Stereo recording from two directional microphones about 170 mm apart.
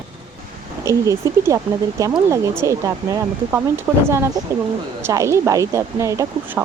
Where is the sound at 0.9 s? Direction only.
20° right (ahead or behind).